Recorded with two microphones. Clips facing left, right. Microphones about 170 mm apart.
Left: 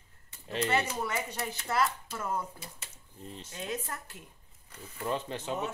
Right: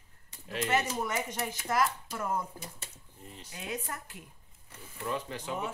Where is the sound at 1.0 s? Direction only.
15° right (ahead or behind).